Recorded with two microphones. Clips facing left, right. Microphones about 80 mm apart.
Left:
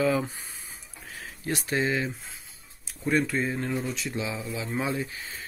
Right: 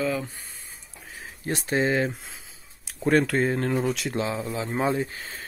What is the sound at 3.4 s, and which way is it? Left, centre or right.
Speech, right.